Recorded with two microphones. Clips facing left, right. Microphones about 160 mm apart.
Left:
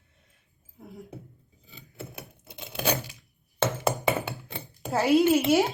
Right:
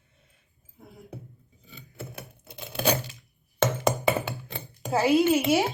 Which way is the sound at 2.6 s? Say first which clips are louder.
Right 3 dB; 15° left (ahead or behind).